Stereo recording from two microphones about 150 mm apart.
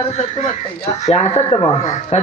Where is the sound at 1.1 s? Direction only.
45° left (ahead or behind).